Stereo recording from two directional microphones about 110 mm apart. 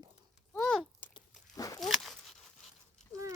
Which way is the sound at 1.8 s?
Centre (ahead or behind).